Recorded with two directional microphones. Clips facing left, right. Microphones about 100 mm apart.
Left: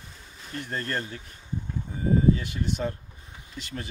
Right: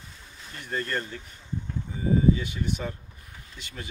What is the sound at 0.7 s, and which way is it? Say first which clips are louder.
Speech: right 2 dB; 40° left (ahead or behind).